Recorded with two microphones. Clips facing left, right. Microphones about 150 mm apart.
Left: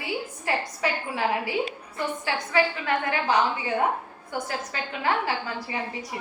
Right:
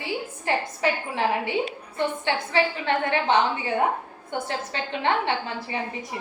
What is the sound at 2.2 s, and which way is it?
A woman's voice, 30° right (ahead or behind).